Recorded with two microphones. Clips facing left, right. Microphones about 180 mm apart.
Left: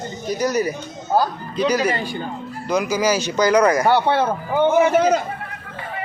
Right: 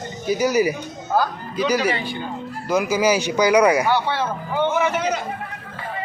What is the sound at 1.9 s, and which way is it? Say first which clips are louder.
Speech: left 2 dB; 45° left (ahead or behind).